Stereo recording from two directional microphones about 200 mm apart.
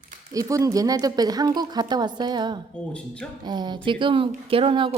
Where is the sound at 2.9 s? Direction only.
5° left (ahead or behind).